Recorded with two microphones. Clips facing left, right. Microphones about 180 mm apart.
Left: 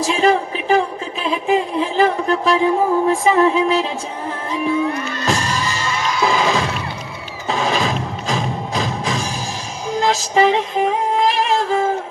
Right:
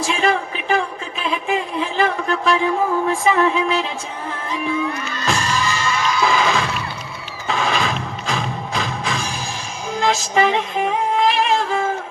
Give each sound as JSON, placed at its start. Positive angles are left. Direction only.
{"t": 0.0, "sound": "speech", "side_deg": 35}
{"t": 2.2, "sound": "music", "side_deg": 35}